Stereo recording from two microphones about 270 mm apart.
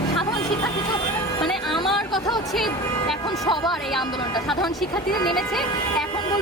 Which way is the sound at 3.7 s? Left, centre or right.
Centre.